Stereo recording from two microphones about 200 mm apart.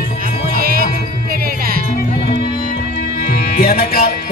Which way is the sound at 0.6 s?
45° right (ahead or behind).